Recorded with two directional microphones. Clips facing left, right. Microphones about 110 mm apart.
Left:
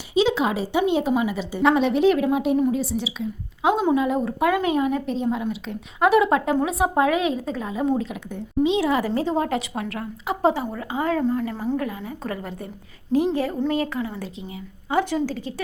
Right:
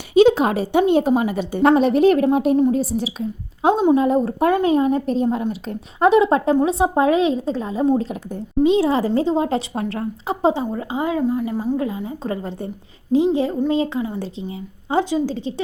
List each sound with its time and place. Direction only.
0.1 s a woman's voice: 50° right (ahead or behind)
6.1 s a woman's voice: 25° right (ahead or behind)
11.1 s a woman's voice: 10° right (ahead or behind)
11.8 s a woman's voice: 25° right (ahead or behind)